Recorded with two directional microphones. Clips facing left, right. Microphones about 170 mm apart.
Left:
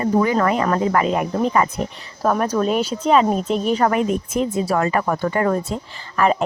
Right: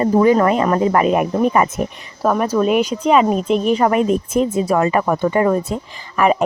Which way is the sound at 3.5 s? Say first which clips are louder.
Right 6 dB; 35° left (ahead or behind).